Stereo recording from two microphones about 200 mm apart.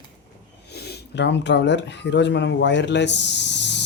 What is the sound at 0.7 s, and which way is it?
Speech, 55° left (ahead or behind).